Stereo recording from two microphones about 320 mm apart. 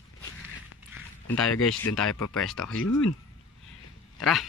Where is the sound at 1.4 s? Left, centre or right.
Left.